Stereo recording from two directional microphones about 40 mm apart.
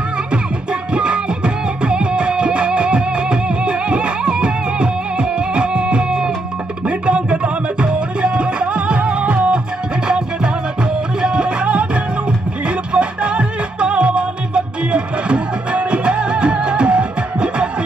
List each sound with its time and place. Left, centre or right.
0.9 s music: right